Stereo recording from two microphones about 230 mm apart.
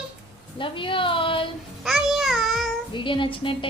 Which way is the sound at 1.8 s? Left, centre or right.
Centre.